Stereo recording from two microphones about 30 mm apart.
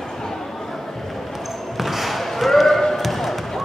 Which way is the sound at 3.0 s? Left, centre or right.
Centre.